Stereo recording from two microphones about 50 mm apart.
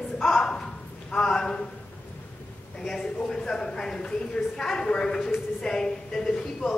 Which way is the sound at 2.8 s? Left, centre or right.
Centre.